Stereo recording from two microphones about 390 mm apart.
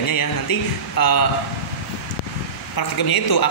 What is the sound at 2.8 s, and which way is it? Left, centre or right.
Speech, left.